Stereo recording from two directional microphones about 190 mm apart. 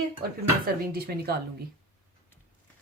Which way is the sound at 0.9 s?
55° right (ahead or behind).